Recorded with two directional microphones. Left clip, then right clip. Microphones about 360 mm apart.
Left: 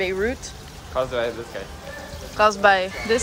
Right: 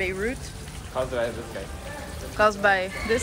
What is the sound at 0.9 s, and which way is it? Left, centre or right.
Speech, left.